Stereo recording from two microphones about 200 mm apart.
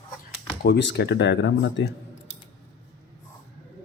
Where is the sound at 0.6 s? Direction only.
60° left (ahead or behind).